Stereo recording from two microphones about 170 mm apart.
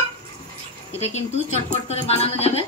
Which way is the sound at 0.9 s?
40° left (ahead or behind).